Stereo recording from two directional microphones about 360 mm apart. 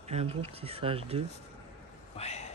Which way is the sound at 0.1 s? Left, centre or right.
Centre.